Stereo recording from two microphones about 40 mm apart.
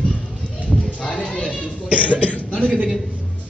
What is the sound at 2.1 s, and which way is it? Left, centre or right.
Speech, left.